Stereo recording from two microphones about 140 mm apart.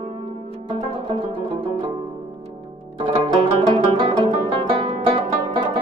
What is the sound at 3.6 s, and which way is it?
Music, 40° right (ahead or behind).